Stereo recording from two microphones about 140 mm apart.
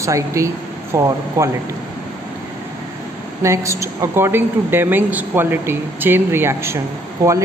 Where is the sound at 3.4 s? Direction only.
20° right (ahead or behind).